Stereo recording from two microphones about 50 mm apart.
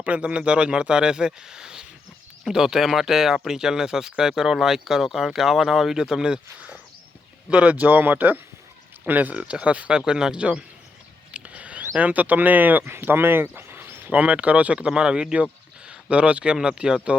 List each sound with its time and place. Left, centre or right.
0.0 s speech: right
7.5 s speech: right
10.1 s speech: centre
11.3 s a sound: right
11.9 s speech: right
12.8 s speech: right
14.1 s speech: right